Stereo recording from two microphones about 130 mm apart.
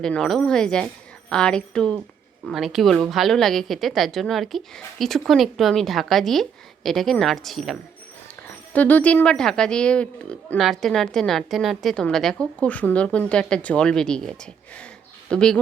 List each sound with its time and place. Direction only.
0.0 s a woman's voice: 5° left (ahead or behind)
8.7 s a woman's voice: 10° left (ahead or behind)